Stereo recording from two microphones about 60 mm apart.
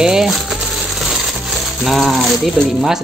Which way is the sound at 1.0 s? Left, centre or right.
Centre.